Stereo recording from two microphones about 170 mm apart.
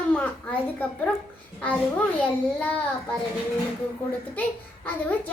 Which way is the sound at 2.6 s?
10° left (ahead or behind).